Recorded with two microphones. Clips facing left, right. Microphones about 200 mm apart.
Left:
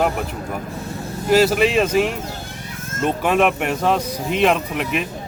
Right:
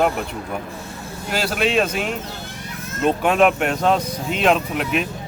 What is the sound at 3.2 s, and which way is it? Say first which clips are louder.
Speech: even; centre (ahead or behind).